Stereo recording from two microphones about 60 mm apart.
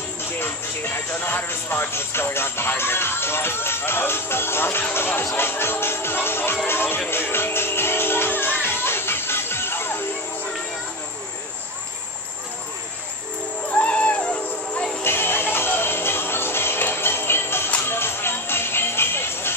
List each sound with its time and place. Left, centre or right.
0.2 s speech: left
4.9 s music: left
13.7 s music: left
15.0 s music: left